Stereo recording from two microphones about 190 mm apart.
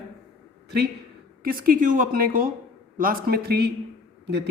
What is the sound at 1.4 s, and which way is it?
A man's voice, 50° right (ahead or behind).